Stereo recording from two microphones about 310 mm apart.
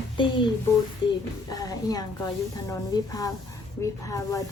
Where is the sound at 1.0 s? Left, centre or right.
Centre.